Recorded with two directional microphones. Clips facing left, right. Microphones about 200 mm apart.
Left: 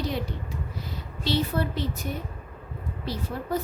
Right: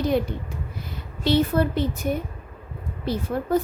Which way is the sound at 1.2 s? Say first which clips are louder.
Right 6 dB; 55° right (ahead or behind).